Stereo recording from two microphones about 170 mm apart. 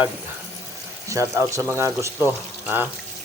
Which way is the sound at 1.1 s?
20° right (ahead or behind).